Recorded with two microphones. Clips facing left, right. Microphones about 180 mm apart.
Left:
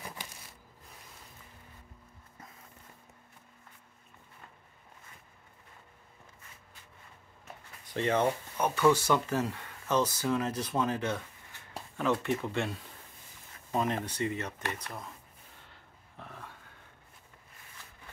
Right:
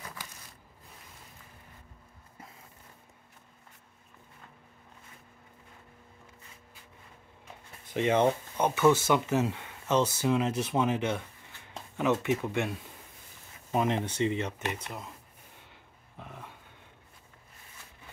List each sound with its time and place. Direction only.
7.9 s speech: 15° right (ahead or behind)
14.4 s speech: 15° right (ahead or behind)
15.7 s dog: 15° right (ahead or behind)